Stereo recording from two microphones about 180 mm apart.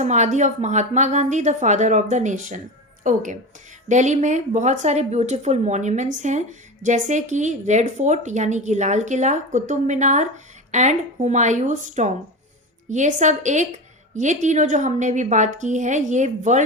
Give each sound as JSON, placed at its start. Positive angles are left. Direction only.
{"t": 0.0, "sound": "a woman's voice", "side_deg": -40}